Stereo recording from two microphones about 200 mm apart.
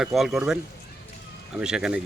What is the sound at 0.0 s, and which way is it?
Speech, centre (ahead or behind).